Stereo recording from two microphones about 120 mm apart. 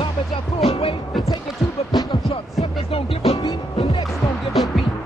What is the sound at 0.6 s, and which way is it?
Music, 55° left (ahead or behind).